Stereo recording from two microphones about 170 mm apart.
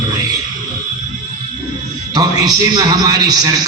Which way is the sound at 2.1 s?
25° right (ahead or behind).